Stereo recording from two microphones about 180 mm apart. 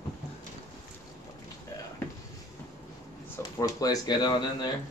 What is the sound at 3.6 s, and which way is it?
Speech, 20° left (ahead or behind).